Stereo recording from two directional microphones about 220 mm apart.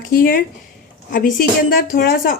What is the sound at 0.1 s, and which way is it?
A woman's voice, 40° left (ahead or behind).